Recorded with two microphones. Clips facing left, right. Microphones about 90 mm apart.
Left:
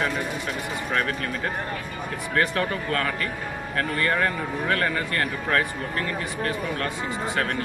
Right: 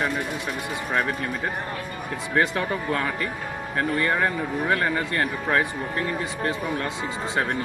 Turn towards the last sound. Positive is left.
turn(degrees=-20)  # may be behind; listen again after turning